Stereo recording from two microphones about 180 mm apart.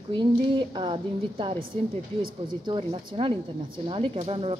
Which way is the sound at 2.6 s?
25° right (ahead or behind).